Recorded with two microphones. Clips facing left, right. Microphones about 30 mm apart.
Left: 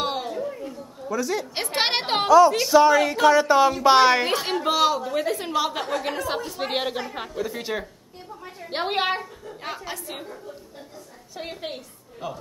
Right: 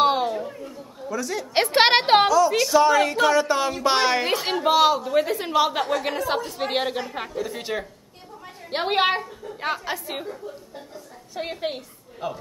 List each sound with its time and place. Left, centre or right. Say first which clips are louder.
0.0 s a sound: right 6 dB; centre
1.0 s a woman's voice: left 2 dB; centre
1.5 s a woman's voice: right 12 dB; right
2.5 s a woman's voice: left 1 dB; centre
9.6 s a woman's voice: right 6 dB; centre
11.3 s a woman's voice: right 5 dB; centre